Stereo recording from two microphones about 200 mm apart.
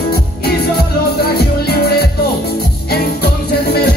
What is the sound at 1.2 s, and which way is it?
Music, 50° left (ahead or behind).